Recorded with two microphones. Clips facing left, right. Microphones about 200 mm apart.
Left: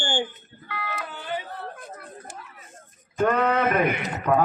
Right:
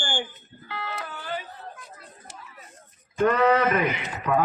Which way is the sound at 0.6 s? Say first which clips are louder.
Left 1 dB; 30° right (ahead or behind).